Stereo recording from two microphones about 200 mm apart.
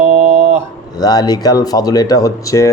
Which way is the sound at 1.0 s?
20° left (ahead or behind).